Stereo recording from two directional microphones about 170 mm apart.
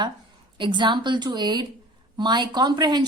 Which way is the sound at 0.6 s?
25° right (ahead or behind).